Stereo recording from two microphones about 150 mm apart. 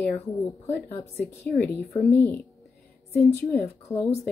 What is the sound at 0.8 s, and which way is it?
Speech, 15° left (ahead or behind).